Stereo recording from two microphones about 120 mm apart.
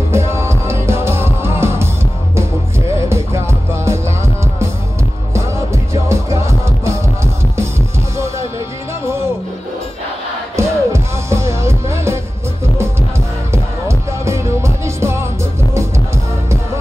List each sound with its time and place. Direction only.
0.1 s music: 20° right (ahead or behind)
3.1 s music: 20° right (ahead or behind)
6.0 s music: 25° right (ahead or behind)
10.5 s music: 25° right (ahead or behind)
13.5 s music: 25° right (ahead or behind)